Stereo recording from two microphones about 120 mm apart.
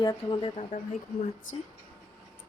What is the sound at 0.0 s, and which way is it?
Speech, 35° left (ahead or behind).